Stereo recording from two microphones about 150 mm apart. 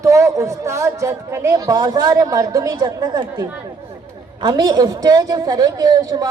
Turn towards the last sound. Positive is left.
turn(degrees=-25)  # may be behind; listen again after turning